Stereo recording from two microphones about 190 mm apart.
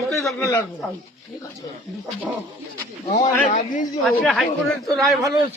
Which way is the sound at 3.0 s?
35° left (ahead or behind).